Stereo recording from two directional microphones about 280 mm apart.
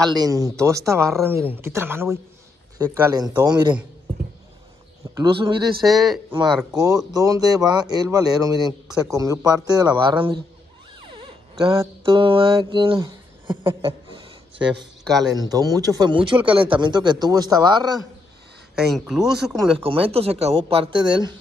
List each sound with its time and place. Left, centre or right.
0.1 s speech: centre
5.1 s speech: centre
5.8 s speech: centre
6.8 s speech: centre
11.1 s mantra: centre
15.3 s speech: centre
18.8 s speech: centre
19.8 s speech: centre